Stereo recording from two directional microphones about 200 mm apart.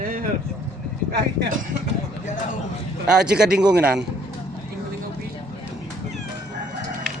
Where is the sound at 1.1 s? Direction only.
55° right (ahead or behind).